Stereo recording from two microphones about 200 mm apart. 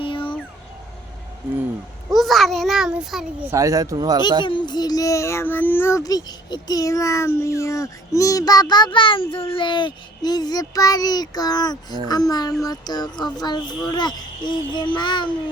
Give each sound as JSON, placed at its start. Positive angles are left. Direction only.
{"t": 0.0, "sound": "a sound", "side_deg": 25}
{"t": 2.0, "sound": "a child's voice", "side_deg": 0}
{"t": 3.5, "sound": "speech", "side_deg": -15}
{"t": 4.4, "sound": "speech", "side_deg": 25}